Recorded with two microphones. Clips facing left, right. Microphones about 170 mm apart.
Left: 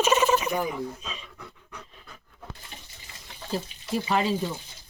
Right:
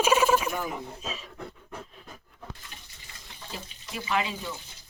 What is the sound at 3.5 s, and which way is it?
Speech, 40° left (ahead or behind).